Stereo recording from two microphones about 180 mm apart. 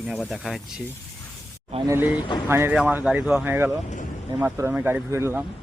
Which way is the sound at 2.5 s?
15° right (ahead or behind).